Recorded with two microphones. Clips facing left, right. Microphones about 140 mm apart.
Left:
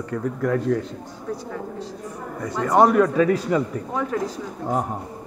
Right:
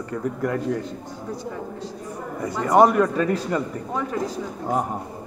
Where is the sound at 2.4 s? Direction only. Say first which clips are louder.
Right 1 dB; 5° right (ahead or behind).